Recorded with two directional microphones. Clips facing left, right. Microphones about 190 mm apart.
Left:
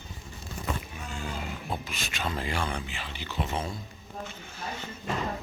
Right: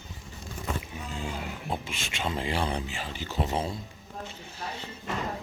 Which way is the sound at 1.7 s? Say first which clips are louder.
Right 3 dB; 25° right (ahead or behind).